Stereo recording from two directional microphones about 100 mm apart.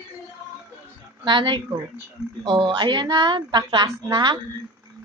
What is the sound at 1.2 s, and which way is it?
A woman's voice, 50° right (ahead or behind).